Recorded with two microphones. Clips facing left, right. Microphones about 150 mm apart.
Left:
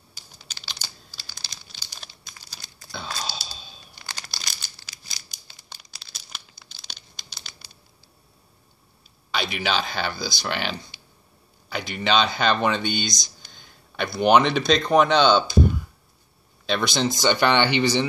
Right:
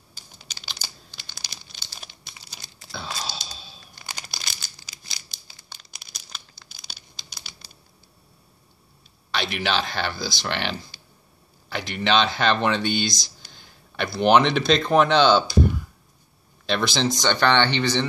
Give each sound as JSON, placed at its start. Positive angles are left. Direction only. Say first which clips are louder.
{"t": 0.6, "sound": "computer keyboard", "louder": "right 1 dB", "side_deg": -15}
{"t": 2.9, "sound": "a sound", "louder": "even", "side_deg": 0}
{"t": 4.0, "sound": "a sound", "louder": "right 1 dB", "side_deg": -15}
{"t": 5.9, "sound": "crumpling", "louder": "right 1 dB", "side_deg": -20}
{"t": 6.7, "sound": "crumpling", "louder": "even", "side_deg": -10}
{"t": 9.3, "sound": "speech", "louder": "even", "side_deg": 0}